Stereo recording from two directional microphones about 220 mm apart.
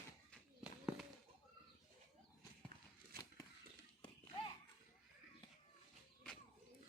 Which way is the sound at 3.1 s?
40° right (ahead or behind).